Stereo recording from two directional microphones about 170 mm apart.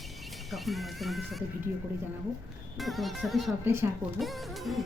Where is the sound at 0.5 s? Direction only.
Centre (ahead or behind).